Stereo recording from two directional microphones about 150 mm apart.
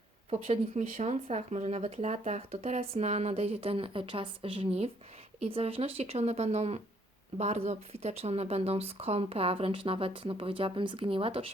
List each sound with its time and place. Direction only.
0.8 s speech: 50° right (ahead or behind)